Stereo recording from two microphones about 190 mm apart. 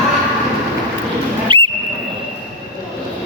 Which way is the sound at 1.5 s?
25° right (ahead or behind).